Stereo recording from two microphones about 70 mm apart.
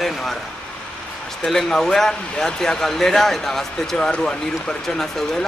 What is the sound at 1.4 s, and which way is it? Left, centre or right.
Speech, centre.